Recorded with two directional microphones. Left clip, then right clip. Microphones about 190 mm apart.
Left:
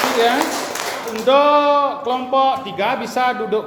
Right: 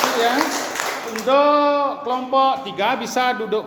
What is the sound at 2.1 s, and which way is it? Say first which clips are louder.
A man's voice: right 1 dB; 15° right (ahead or behind).